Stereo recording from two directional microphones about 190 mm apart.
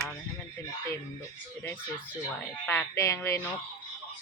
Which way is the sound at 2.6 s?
15° left (ahead or behind).